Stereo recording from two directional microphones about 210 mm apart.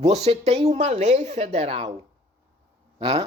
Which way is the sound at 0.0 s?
30° right (ahead or behind).